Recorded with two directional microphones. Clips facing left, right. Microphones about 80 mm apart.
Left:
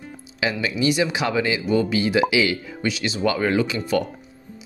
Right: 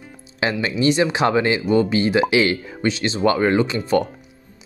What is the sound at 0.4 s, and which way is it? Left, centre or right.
Speech, right.